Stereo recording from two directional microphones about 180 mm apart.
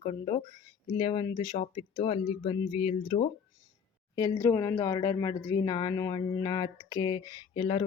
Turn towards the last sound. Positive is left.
turn(degrees=30)  # may be behind; listen again after turning